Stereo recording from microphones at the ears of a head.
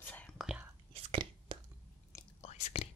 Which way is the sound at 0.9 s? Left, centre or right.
Right.